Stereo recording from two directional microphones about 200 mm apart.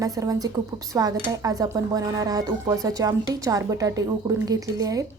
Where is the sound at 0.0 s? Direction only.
15° right (ahead or behind).